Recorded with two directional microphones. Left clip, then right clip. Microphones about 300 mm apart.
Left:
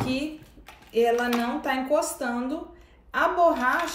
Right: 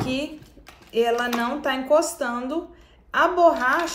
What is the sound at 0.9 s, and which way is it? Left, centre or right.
Speech, right.